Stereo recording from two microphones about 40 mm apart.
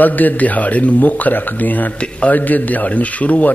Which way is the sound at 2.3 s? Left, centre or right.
Left.